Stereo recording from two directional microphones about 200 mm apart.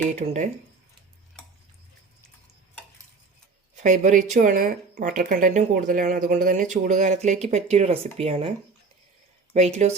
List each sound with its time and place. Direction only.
0.1 s speech: 35° right (ahead or behind)
3.8 s speech: 40° right (ahead or behind)